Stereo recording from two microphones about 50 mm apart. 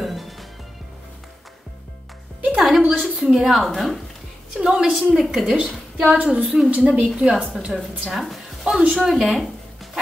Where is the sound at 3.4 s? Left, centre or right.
Centre.